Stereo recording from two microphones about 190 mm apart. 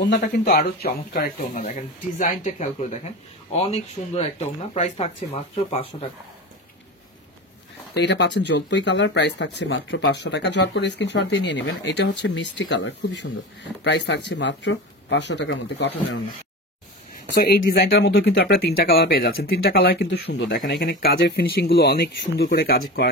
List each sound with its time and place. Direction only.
0.1 s speech: 55° left (ahead or behind); by 6.0 s 30° left (ahead or behind)
7.9 s speech: 65° left (ahead or behind)
17.4 s speech: 55° left (ahead or behind)